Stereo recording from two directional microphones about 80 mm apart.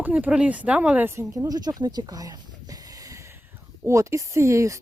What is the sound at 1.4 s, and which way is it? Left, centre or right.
Speech, right.